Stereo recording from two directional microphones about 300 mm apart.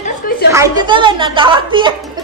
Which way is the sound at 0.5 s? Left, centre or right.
Centre.